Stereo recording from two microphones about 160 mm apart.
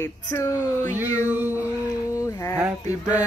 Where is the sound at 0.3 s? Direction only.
20° left (ahead or behind).